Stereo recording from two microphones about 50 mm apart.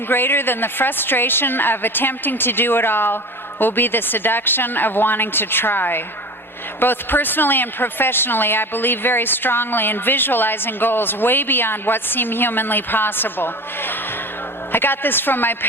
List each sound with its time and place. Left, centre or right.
0.1 s a woman's voice: left